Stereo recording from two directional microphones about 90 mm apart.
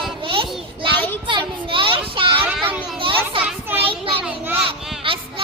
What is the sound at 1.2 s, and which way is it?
A child's voice, 65° right (ahead or behind).